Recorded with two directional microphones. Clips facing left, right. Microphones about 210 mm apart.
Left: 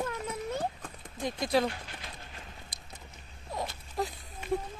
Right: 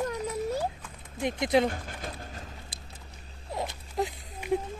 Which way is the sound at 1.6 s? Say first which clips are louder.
Right 4 dB; 50° right (ahead or behind).